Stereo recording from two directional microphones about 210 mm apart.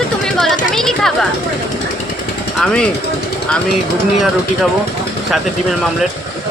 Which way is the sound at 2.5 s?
5° left (ahead or behind).